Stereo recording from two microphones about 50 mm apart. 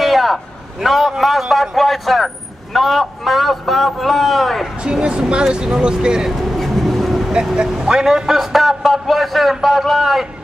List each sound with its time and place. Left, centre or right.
0.0 s a man's voice: centre
4.8 s speech: centre
6.5 s vehicle: centre
7.6 s a man's voice: centre